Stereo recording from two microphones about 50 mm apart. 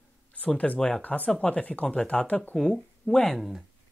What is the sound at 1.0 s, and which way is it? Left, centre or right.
Speech, left.